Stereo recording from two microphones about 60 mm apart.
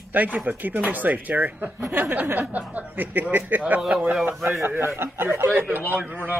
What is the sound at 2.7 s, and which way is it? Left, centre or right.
Speech, right.